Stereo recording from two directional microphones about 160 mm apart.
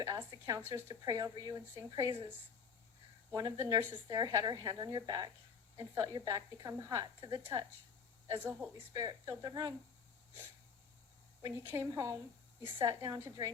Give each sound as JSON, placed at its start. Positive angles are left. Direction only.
{"t": 0.0, "sound": "a woman's voice", "side_deg": -25}
{"t": 3.3, "sound": "speech", "side_deg": -20}
{"t": 8.3, "sound": "speech", "side_deg": -15}
{"t": 8.9, "sound": "speech", "side_deg": -25}
{"t": 11.4, "sound": "speech", "side_deg": -20}